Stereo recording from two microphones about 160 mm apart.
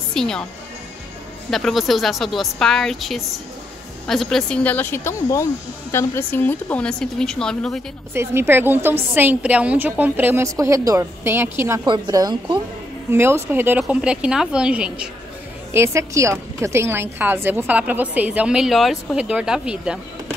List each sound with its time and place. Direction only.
0.1 s a woman's voice: 5° left (ahead or behind)
1.5 s a woman's voice: centre (ahead or behind)
8.1 s a woman's voice: 15° right (ahead or behind)
11.8 s a woman's voice: 25° right (ahead or behind)
13.1 s a woman's voice: 15° right (ahead or behind)
15.7 s a woman's voice: 15° right (ahead or behind)